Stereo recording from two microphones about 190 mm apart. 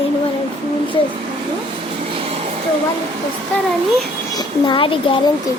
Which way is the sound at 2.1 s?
30° right (ahead or behind).